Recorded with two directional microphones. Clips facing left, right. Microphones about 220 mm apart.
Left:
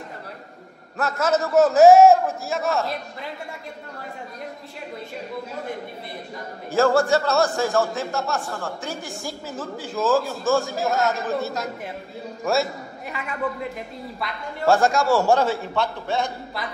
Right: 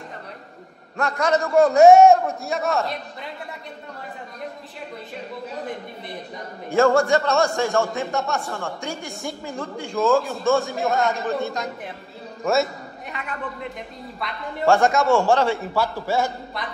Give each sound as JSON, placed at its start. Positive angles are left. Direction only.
{"t": 0.9, "sound": "a man's voice", "side_deg": 5}
{"t": 6.7, "sound": "a man's voice", "side_deg": 0}
{"t": 15.6, "sound": "speech", "side_deg": -5}